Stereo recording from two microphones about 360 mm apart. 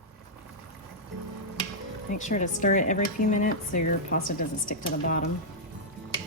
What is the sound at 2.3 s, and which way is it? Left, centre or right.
A woman's voice, left.